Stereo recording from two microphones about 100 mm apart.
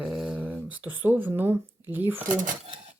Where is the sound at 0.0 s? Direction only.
5° right (ahead or behind).